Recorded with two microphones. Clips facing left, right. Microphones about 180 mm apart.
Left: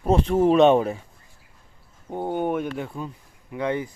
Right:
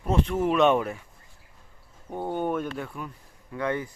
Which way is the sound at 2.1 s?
20° left (ahead or behind).